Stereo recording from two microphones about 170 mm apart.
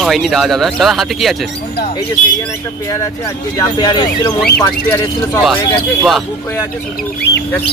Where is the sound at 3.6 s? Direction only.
25° left (ahead or behind).